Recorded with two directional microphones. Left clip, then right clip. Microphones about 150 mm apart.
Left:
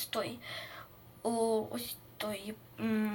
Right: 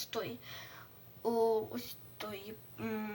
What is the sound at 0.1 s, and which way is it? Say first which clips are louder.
Speech: left 4 dB; 15° left (ahead or behind).